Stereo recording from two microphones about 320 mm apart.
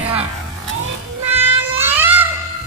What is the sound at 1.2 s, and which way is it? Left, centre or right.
Music, centre.